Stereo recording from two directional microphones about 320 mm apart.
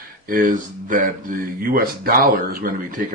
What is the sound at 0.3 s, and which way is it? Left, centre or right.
A man's voice, right.